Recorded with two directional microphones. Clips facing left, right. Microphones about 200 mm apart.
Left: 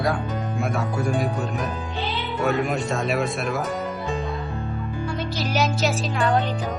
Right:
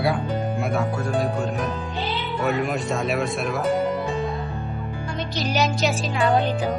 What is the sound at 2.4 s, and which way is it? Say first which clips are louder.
A man's voice: left 1 dB; centre (ahead or behind).